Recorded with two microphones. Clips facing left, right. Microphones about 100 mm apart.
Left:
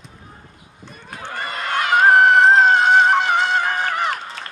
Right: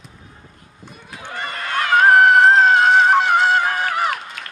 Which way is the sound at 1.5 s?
25° left (ahead or behind).